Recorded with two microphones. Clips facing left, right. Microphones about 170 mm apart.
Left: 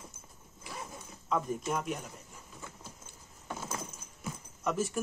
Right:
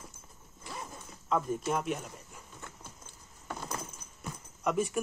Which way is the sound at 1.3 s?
5° right (ahead or behind).